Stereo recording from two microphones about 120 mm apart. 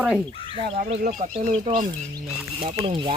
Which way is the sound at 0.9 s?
70° right (ahead or behind).